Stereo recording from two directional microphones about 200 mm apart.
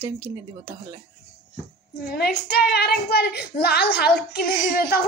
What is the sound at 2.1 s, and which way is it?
Speech, 50° left (ahead or behind).